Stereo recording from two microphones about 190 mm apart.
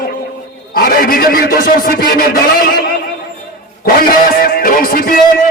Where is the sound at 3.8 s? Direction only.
50° left (ahead or behind).